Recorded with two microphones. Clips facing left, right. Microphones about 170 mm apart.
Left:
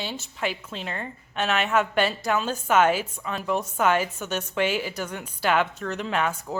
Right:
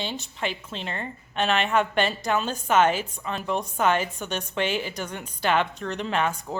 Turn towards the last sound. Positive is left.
turn(degrees=5)  # may be behind; listen again after turning